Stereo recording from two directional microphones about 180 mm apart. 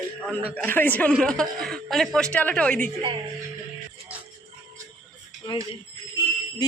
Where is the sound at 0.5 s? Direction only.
10° left (ahead or behind).